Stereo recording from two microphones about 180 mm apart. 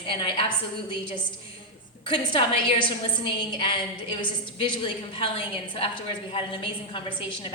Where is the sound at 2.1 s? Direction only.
25° left (ahead or behind).